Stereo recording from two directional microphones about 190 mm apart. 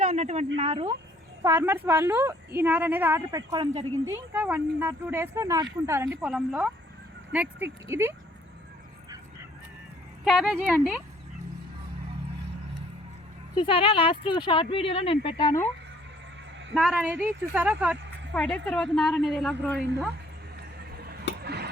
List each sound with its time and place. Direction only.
0.0 s a sound: 40° right (ahead or behind)
0.5 s speech: 30° right (ahead or behind)
1.5 s a woman's voice: 10° right (ahead or behind)
6.1 s a woman's voice: centre (ahead or behind)
10.2 s a woman's voice: centre (ahead or behind)
13.6 s speech: 30° left (ahead or behind)
16.7 s a woman's voice: 5° right (ahead or behind)
18.3 s a woman's voice: 5° left (ahead or behind)
21.4 s a sound: 60° right (ahead or behind)